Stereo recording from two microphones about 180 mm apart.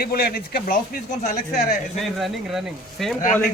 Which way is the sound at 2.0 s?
Centre (ahead or behind).